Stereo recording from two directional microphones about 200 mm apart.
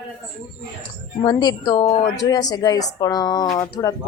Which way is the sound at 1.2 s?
20° left (ahead or behind).